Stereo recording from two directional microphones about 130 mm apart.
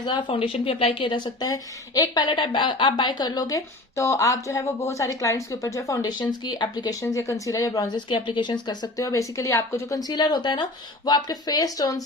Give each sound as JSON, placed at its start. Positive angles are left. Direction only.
{"t": 0.0, "sound": "a woman's voice", "side_deg": 35}
{"t": 8.1, "sound": "a woman's voice", "side_deg": 40}